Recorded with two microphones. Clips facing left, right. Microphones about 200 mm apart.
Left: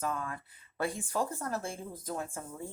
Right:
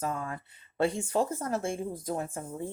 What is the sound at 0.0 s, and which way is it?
Speech, 25° right (ahead or behind).